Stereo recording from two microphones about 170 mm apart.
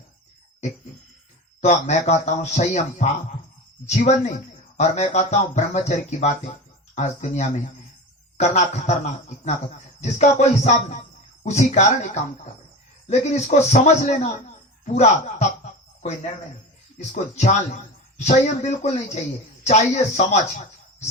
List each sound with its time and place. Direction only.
1.6 s speech: 45° left (ahead or behind)
13.1 s speech: 40° left (ahead or behind)
17.1 s speech: 40° left (ahead or behind)